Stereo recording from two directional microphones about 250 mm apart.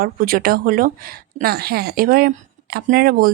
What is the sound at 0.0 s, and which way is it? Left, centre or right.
Speech, right.